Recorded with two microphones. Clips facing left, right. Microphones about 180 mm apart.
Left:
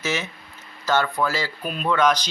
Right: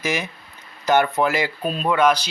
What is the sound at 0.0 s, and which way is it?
Speech, 10° right (ahead or behind).